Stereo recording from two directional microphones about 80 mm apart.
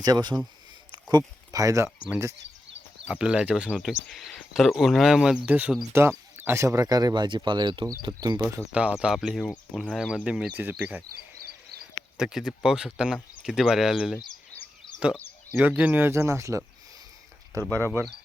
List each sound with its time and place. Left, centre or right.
0.0 s speech: right
1.5 s speech: right
3.1 s speech: centre
3.8 s speech: centre
5.9 s speech: right
8.7 s speech: centre
9.1 s speech: centre
10.6 s speech: right
12.1 s speech: centre
15.7 s speech: right